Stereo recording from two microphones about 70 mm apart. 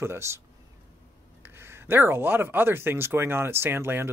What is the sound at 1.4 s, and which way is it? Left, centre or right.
Speech, right.